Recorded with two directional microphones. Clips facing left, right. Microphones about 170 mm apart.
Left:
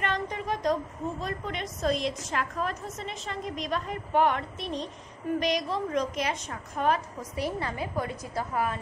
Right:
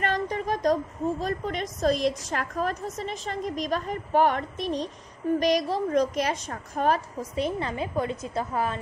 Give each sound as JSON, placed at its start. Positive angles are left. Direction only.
{"t": 0.0, "sound": "a sound", "side_deg": -40}
{"t": 1.2, "sound": "a woman's voice", "side_deg": -40}
{"t": 7.3, "sound": "a woman's voice", "side_deg": -25}